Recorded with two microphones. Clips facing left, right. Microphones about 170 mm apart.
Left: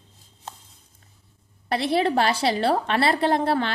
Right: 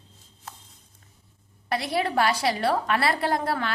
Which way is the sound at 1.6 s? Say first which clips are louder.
Left 4 dB; 30° left (ahead or behind).